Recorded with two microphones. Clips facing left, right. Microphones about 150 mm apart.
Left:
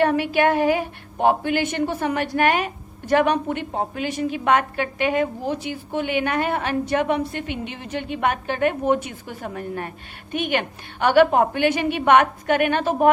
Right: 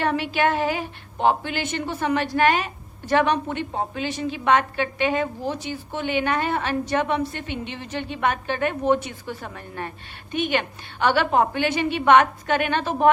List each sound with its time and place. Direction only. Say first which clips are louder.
0.0 s a woman's voice: left 4 dB; 50° left (ahead or behind)
7.4 s a woman's voice: left 2 dB; 10° left (ahead or behind)
7.7 s a woman's voice: left 2 dB; 50° left (ahead or behind)